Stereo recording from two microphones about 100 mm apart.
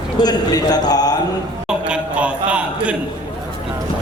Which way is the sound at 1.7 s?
10° right (ahead or behind).